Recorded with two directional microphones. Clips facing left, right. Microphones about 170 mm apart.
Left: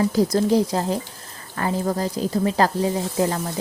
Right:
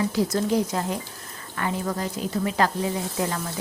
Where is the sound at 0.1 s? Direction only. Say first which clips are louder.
Left 5 dB; 35° left (ahead or behind).